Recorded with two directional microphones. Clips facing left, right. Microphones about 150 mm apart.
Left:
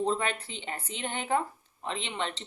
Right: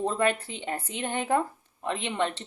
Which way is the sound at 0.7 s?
50° right (ahead or behind).